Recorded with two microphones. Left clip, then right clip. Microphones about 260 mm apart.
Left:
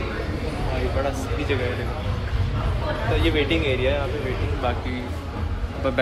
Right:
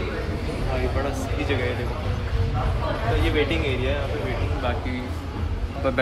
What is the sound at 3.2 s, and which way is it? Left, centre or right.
Speech, centre.